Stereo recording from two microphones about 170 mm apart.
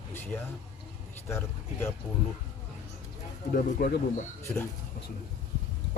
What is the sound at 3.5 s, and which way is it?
Speech, 60° left (ahead or behind).